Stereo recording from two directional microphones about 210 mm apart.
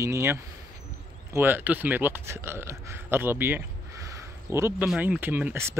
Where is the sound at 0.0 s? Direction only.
15° right (ahead or behind).